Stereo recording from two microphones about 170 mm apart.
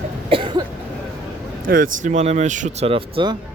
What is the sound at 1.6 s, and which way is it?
Speech, 55° right (ahead or behind).